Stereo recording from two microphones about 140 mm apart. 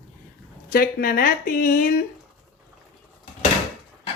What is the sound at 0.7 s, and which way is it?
Speech, 90° left.